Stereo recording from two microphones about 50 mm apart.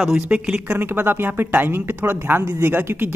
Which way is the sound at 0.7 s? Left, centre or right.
Right.